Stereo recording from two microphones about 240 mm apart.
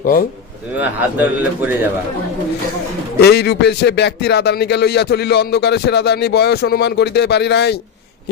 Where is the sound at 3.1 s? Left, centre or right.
Left.